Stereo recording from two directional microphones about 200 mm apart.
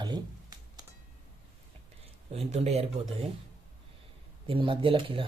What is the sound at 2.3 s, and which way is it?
Speech, 30° right (ahead or behind).